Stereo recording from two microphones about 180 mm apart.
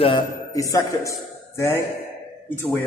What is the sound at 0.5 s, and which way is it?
A man's voice, 20° left (ahead or behind).